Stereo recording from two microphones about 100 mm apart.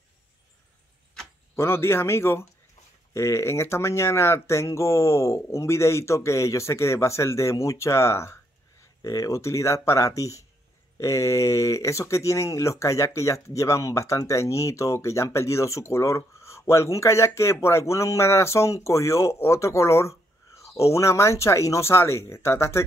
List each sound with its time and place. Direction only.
1.5 s speech: 25° left (ahead or behind)